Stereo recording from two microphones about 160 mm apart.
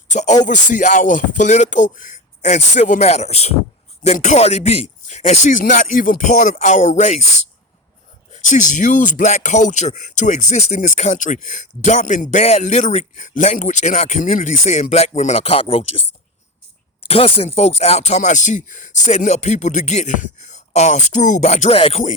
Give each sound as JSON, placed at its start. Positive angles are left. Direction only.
{"t": 0.1, "sound": "speech", "side_deg": 50}
{"t": 8.3, "sound": "speech", "side_deg": 50}
{"t": 17.1, "sound": "speech", "side_deg": 35}